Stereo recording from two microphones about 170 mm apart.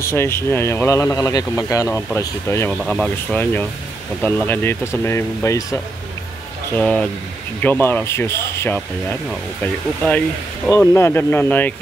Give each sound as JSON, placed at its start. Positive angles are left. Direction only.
{"t": 0.0, "sound": "speech", "side_deg": 15}
{"t": 2.7, "sound": "speech", "side_deg": 5}
{"t": 6.7, "sound": "speech", "side_deg": 5}